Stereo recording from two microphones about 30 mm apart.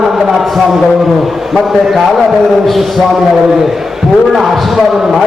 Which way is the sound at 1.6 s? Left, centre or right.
Centre.